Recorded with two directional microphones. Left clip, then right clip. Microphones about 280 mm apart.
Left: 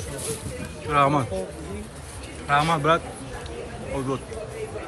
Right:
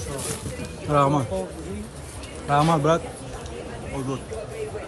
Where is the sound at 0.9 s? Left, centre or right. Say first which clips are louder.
Even; centre.